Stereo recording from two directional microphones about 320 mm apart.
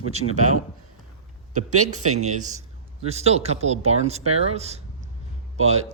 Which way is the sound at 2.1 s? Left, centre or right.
Right.